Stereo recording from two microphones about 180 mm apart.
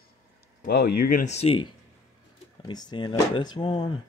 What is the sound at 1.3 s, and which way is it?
Speech, 35° left (ahead or behind).